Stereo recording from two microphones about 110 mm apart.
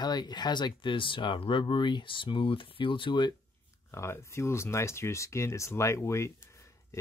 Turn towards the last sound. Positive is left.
turn(degrees=25)  # may be behind; listen again after turning